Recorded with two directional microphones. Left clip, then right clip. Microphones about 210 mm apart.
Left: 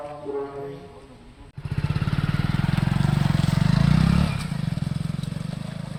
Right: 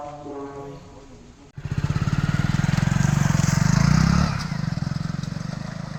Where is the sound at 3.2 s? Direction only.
5° right (ahead or behind).